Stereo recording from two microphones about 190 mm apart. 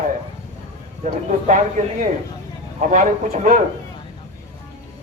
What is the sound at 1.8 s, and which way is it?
A man's voice, 45° right (ahead or behind).